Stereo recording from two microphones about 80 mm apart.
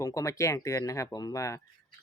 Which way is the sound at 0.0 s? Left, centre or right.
Left.